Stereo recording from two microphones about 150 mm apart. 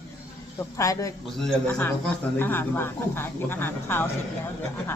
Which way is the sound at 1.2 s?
5° left (ahead or behind).